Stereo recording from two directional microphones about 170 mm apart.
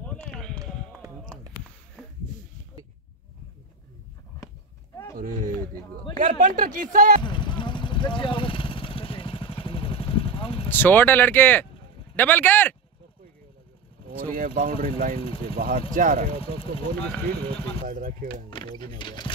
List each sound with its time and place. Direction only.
0.0 s a sound: 5° left (ahead or behind)
2.0 s a sound: centre (ahead or behind)
5.1 s speech: 55° right (ahead or behind)
7.2 s vehicle: 30° left (ahead or behind)
10.7 s speech: 10° left (ahead or behind)
14.2 s speech: 55° right (ahead or behind)
15.1 s speech: 35° left (ahead or behind)
15.4 s speech: 60° right (ahead or behind)
17.8 s speech: 55° right (ahead or behind)
18.5 s speech: 25° left (ahead or behind)